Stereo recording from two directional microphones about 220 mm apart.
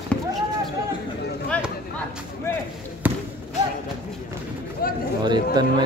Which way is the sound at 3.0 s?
10° right (ahead or behind).